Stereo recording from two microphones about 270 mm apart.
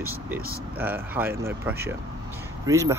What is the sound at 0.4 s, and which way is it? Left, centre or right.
Speech, right.